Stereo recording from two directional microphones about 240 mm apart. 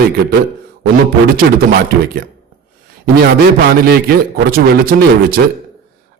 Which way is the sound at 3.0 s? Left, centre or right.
Right.